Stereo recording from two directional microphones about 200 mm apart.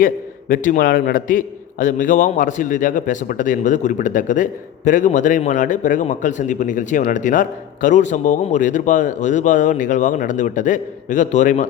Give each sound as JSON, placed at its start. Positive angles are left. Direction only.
{"t": 0.0, "sound": "speech", "side_deg": 45}